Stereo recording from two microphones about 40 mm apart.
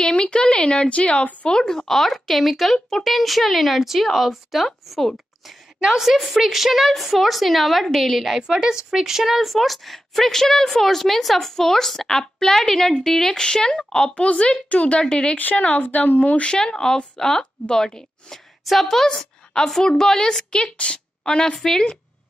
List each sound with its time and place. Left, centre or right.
0.0 s speech: left
1.6 s speech: centre
5.8 s a woman's voice: centre
6.0 s speech: centre
8.4 s speech: centre; by 14.3 s left
14.7 s speech: left
15.3 s speech: left
16.4 s a woman's voice: centre
20.5 s a woman's voice: left
21.5 s a woman's voice: centre